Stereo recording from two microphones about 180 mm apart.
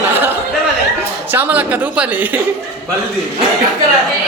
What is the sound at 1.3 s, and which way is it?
Speech, 10° right (ahead or behind).